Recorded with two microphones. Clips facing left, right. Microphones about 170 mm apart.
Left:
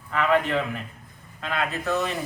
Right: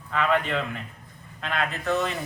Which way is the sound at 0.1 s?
5° left (ahead or behind).